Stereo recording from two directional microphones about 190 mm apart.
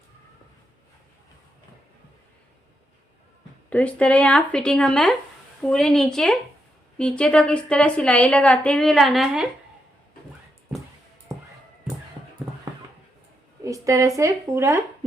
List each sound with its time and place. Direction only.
3.7 s a woman's voice: 5° left (ahead or behind)
11.3 s music: 15° right (ahead or behind)
13.7 s a sound: 15° right (ahead or behind)
14.2 s speech: 15° right (ahead or behind)